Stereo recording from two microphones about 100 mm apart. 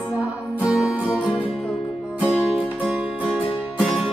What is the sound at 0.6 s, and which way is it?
Music, 10° right (ahead or behind).